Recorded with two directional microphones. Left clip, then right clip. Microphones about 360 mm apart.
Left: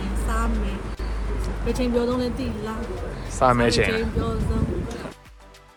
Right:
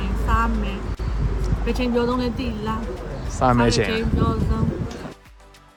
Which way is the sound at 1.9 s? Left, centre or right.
Centre.